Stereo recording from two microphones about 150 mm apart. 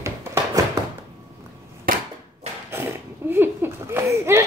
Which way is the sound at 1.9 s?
75° right (ahead or behind).